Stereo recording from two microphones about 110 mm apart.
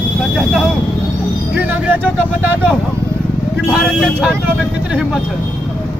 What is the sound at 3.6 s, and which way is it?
Speech, centre (ahead or behind).